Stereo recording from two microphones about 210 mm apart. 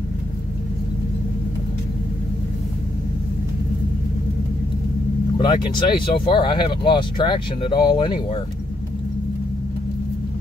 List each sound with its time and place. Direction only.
5.4 s speech: 20° left (ahead or behind)